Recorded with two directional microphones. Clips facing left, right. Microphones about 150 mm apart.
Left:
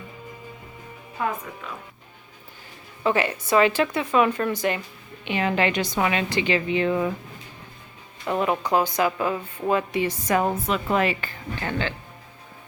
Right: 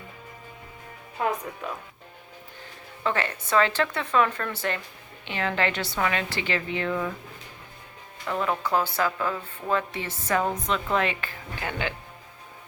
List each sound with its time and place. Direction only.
3.0 s speech: 15° left (ahead or behind)
8.3 s speech: 20° left (ahead or behind); by 11.3 s centre (ahead or behind)
11.6 s speech: 15° right (ahead or behind)